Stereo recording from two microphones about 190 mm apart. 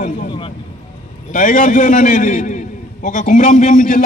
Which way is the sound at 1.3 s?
45° left (ahead or behind).